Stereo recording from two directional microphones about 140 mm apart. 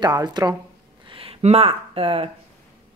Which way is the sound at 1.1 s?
40° right (ahead or behind).